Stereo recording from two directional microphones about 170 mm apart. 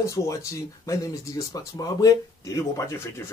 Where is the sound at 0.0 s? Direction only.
20° left (ahead or behind).